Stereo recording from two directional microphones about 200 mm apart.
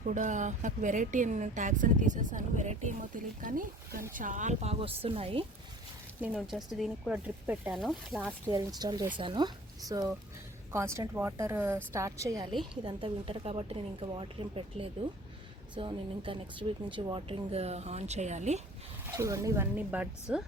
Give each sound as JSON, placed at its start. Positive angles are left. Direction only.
{"t": 0.0, "sound": "speech", "side_deg": -40}
{"t": 6.3, "sound": "speech", "side_deg": 0}
{"t": 8.4, "sound": "speech", "side_deg": -20}
{"t": 19.0, "sound": "speech", "side_deg": -15}